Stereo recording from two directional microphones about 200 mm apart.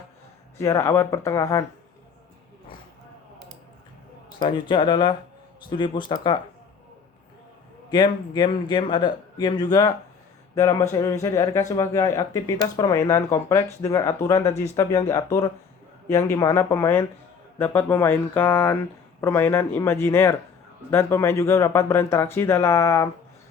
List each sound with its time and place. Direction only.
0.6 s speech: 15° left (ahead or behind)
4.4 s a man's voice: 25° left (ahead or behind)
7.9 s a man's voice: 20° left (ahead or behind)